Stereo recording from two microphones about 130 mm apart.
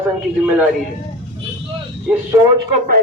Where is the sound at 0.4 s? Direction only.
5° right (ahead or behind).